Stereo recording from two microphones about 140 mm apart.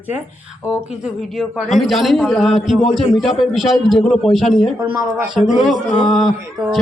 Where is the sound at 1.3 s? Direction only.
Centre (ahead or behind).